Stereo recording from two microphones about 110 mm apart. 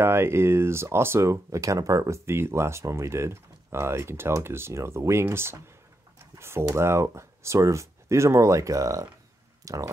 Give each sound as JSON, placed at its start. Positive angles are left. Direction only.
{"t": 0.0, "sound": "speech", "side_deg": -20}